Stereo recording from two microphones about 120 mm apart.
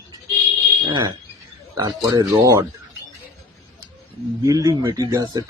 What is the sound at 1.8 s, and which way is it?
Speech, 30° right (ahead or behind).